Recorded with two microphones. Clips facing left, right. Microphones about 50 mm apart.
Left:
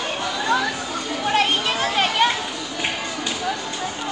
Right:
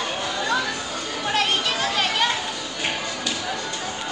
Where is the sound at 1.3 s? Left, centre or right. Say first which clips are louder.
Left 3 dB; centre.